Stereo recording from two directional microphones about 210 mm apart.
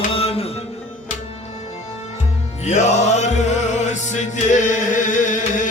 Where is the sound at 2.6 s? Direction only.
35° left (ahead or behind).